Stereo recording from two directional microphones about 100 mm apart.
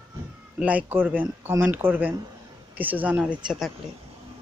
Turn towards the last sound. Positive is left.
turn(degrees=-10)  # may be behind; listen again after turning